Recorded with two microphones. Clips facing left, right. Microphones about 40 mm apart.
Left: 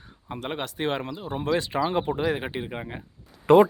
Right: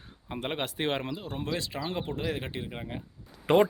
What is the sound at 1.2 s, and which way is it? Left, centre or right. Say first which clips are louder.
Speech: left 6 dB; centre.